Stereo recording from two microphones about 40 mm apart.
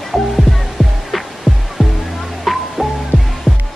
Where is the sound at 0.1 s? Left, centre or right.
Centre.